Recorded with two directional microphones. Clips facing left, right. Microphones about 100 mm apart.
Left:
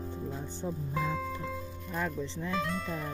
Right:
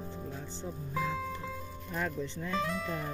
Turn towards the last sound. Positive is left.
turn(degrees=0)  # may be behind; listen again after turning